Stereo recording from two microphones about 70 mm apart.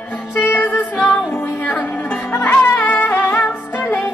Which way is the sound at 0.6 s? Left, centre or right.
Left.